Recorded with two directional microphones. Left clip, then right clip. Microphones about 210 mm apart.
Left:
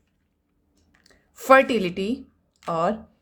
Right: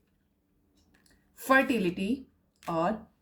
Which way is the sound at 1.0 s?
40° left (ahead or behind).